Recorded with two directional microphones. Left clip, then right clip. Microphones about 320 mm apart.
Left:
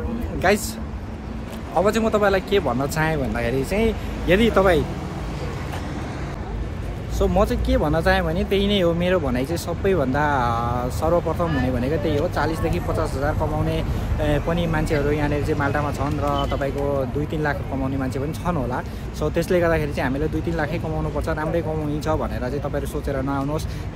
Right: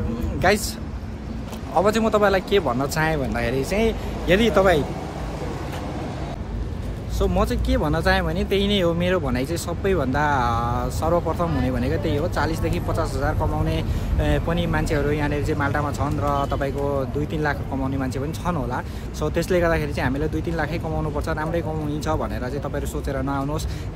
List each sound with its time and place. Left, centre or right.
0.4 s speech: centre
1.8 s speech: centre
7.2 s speech: centre